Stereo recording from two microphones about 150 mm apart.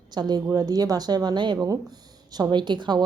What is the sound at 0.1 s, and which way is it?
A woman's voice, 30° right (ahead or behind).